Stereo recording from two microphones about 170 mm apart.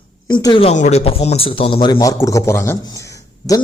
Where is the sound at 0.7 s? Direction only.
45° left (ahead or behind).